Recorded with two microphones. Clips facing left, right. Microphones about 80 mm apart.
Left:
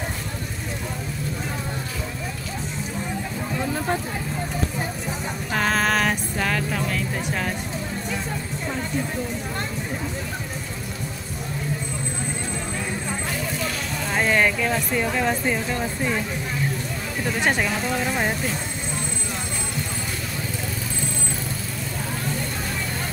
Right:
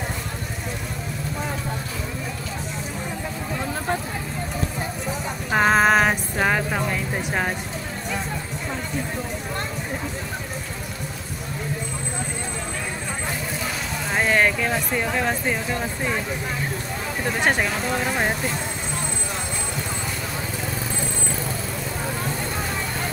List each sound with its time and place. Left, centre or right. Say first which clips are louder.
5.5 s music: right 5 dB; right
14.1 s speech: right 1 dB; centre
17.2 s speech: right 1 dB; centre